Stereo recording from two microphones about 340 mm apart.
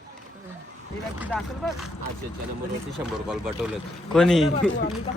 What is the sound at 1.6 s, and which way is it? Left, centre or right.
Speech, centre.